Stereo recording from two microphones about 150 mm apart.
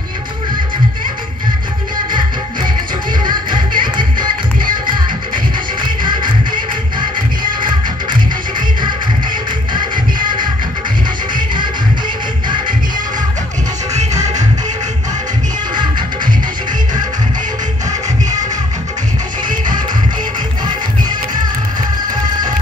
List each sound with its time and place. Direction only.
3.3 s music: 30° right (ahead or behind)
6.0 s music: 30° right (ahead or behind)
11.3 s music: 30° right (ahead or behind)